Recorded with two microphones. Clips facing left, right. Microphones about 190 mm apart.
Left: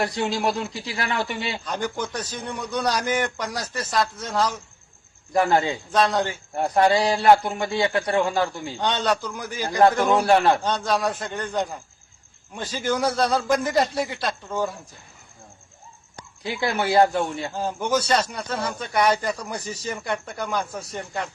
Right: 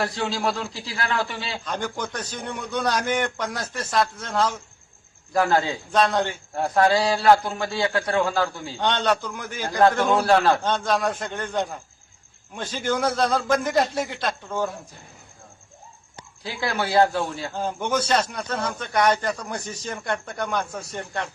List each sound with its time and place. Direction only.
0.0 s a man's voice: 20° left (ahead or behind)
1.6 s a man's voice: centre (ahead or behind)
5.3 s a man's voice: 20° left (ahead or behind)
5.9 s a man's voice: centre (ahead or behind)
6.6 s a man's voice: 20° left (ahead or behind)
8.8 s a man's voice: 5° left (ahead or behind)
10.2 s a man's voice: 15° left (ahead or behind)
10.6 s a man's voice: centre (ahead or behind)
16.4 s a man's voice: 25° left (ahead or behind)
17.5 s a man's voice: 5° left (ahead or behind)